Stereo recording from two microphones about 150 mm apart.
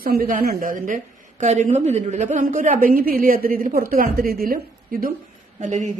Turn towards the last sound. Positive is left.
turn(degrees=-55)  # may be behind; listen again after turning